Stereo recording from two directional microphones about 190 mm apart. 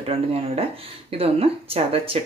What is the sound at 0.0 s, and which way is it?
Speech, 30° right (ahead or behind).